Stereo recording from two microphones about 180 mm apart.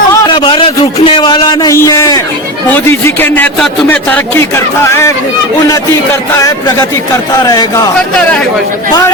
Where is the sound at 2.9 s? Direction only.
15° left (ahead or behind).